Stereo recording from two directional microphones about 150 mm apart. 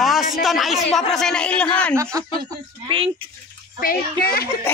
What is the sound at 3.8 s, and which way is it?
Speech, 85° left.